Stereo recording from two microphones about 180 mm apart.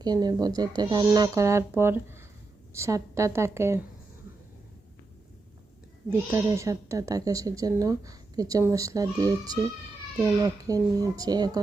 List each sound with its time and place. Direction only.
0.0 s a woman's voice: 20° right (ahead or behind)
6.1 s speech: 15° right (ahead or behind)